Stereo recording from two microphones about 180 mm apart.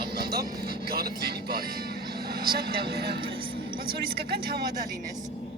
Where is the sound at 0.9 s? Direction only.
60° right (ahead or behind).